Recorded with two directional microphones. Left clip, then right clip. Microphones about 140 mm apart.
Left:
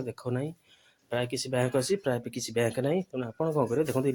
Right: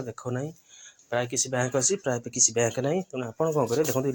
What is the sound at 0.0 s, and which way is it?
Speech, 20° left (ahead or behind).